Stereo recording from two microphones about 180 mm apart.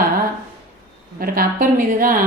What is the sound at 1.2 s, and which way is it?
A woman's voice, 50° right (ahead or behind).